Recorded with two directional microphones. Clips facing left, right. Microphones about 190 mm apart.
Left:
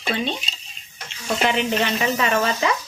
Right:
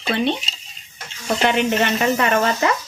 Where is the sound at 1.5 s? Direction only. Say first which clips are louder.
Right 4 dB; 60° right (ahead or behind).